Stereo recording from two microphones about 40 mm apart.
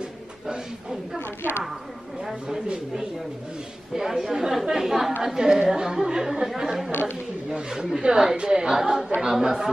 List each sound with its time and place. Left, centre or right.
0.5 s speech: centre
2.4 s speech: centre
6.9 s speech: left
7.4 s speech: centre